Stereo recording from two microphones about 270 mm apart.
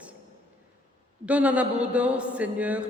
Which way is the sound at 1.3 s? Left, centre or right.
Centre.